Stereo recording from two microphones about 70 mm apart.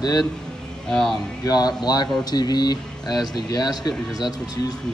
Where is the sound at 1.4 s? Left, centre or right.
Left.